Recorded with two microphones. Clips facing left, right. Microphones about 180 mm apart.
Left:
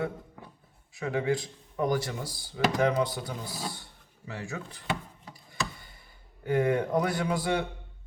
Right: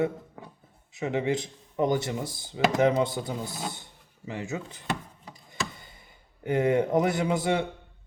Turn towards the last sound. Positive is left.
turn(degrees=-20)  # may be behind; listen again after turning